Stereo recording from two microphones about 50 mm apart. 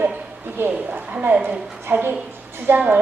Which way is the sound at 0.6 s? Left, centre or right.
Right.